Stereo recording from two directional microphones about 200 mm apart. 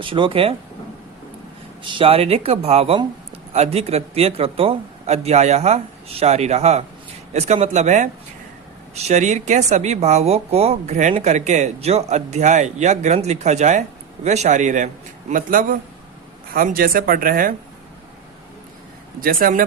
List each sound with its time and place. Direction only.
0.0 s speech: 25° right (ahead or behind)
1.8 s speech: 25° right (ahead or behind); by 17.5 s 45° right (ahead or behind)
19.2 s speech: 45° right (ahead or behind)